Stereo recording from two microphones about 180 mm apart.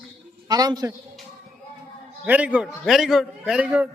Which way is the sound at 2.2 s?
10° right (ahead or behind).